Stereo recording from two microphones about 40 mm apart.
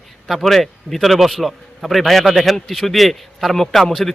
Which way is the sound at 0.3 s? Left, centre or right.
Centre.